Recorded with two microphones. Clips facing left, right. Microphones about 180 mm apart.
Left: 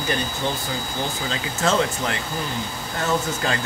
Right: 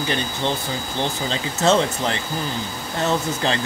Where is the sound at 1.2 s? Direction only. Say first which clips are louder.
Right 4 dB; 25° right (ahead or behind).